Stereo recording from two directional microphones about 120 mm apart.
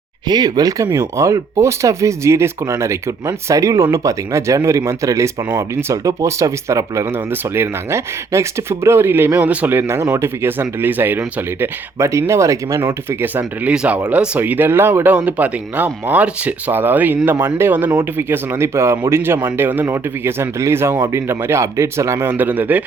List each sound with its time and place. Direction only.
0.3 s speech: 35° right (ahead or behind)
12.8 s speech: 15° right (ahead or behind)